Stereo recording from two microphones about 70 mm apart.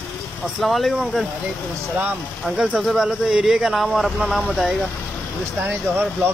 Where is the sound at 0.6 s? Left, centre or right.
Centre.